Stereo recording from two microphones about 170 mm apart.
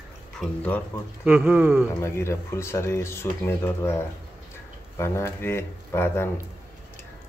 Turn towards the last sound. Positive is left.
turn(degrees=15)  # may be behind; listen again after turning